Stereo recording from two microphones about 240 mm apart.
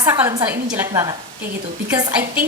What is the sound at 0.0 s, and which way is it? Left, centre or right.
A woman's voice, centre.